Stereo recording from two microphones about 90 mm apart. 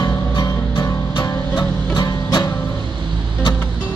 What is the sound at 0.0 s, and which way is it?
Music, 50° left (ahead or behind).